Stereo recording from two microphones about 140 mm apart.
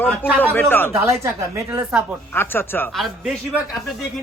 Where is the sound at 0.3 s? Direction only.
10° left (ahead or behind).